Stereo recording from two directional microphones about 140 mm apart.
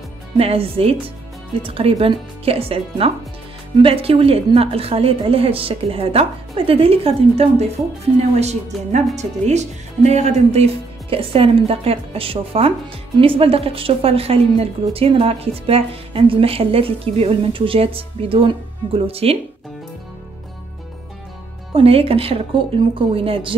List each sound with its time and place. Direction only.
0.4 s a woman's voice: 45° right (ahead or behind)
21.7 s a woman's voice: 45° right (ahead or behind)